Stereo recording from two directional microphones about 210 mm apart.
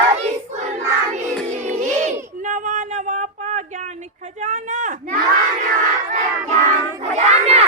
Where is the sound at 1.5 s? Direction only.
35° right (ahead or behind).